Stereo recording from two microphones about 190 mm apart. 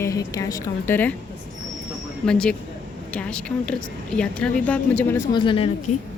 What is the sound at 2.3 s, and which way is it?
A woman's voice, 5° left (ahead or behind).